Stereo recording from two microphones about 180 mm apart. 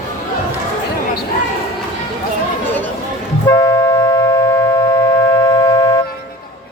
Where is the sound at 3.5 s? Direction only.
20° left (ahead or behind).